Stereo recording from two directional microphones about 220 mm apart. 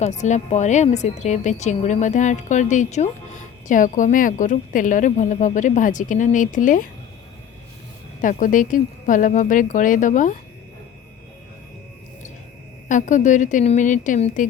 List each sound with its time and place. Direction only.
0.0 s a woman's voice: 30° left (ahead or behind)
8.2 s a woman's voice: 35° left (ahead or behind)
12.9 s a woman's voice: 35° left (ahead or behind)